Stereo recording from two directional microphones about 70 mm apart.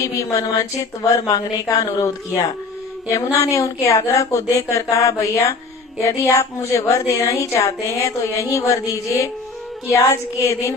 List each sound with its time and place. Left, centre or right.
0.0 s a woman's voice: left